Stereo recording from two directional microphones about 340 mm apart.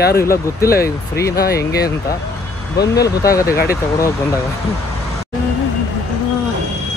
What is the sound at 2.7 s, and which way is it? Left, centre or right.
Speech, centre.